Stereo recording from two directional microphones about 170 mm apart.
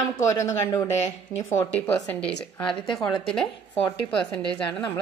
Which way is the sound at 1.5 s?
10° left (ahead or behind).